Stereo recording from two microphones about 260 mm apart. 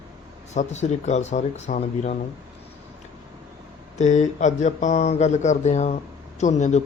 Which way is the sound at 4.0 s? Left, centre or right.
Left.